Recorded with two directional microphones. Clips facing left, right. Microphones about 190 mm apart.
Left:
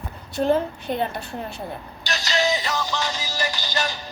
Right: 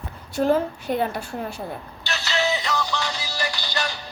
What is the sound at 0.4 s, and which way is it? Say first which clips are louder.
Speech: even; 5° right (ahead or behind).